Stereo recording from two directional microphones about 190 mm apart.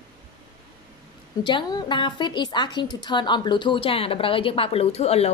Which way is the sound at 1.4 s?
25° left (ahead or behind).